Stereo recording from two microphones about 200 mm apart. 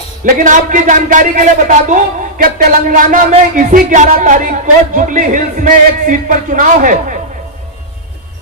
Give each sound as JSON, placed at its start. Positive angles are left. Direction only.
{"t": 0.3, "sound": "speech", "side_deg": -40}